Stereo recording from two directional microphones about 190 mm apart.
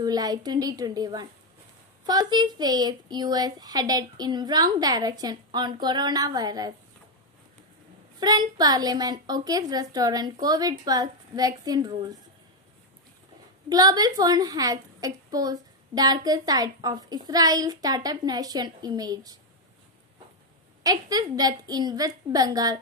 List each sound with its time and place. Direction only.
0.0 s a woman's voice: 20° right (ahead or behind)
8.2 s a woman's voice: 20° right (ahead or behind)
13.7 s a woman's voice: 20° right (ahead or behind)
20.8 s a woman's voice: 20° right (ahead or behind)